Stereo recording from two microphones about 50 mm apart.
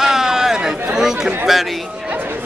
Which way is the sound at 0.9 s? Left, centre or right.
Centre.